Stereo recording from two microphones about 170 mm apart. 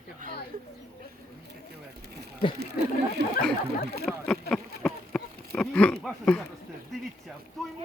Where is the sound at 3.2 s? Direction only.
70° right (ahead or behind).